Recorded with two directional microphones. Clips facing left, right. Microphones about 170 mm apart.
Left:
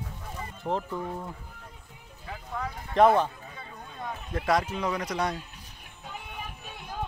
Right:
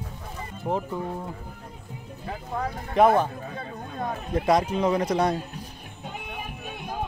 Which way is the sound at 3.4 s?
50° right (ahead or behind).